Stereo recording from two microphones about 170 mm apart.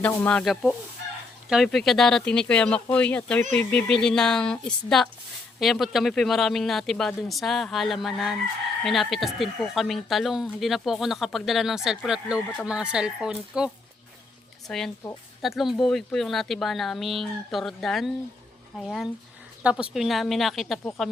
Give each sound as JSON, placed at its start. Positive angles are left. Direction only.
{"t": 0.0, "sound": "speech", "side_deg": 10}
{"t": 14.7, "sound": "speech", "side_deg": 5}